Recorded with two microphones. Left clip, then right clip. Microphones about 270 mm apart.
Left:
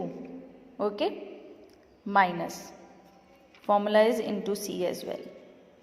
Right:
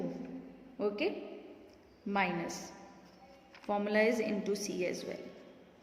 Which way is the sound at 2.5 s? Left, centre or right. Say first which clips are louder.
Left 2 dB; centre.